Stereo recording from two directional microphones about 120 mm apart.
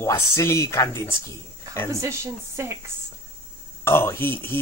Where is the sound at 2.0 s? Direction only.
25° right (ahead or behind).